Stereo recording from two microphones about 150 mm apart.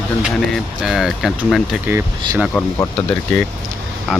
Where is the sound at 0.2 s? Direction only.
5° right (ahead or behind).